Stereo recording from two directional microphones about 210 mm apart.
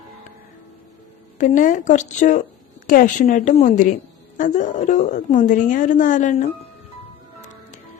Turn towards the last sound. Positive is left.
turn(degrees=35)  # may be behind; listen again after turning